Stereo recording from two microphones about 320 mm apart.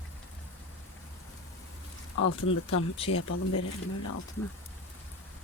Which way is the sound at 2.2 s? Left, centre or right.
Left.